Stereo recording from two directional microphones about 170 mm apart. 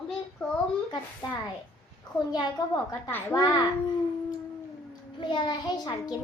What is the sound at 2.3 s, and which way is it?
A child's voice, 25° left (ahead or behind).